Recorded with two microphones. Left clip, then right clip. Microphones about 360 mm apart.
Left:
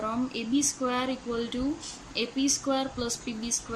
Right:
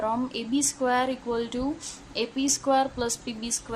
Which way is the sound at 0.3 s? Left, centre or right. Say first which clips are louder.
Right 1 dB; centre.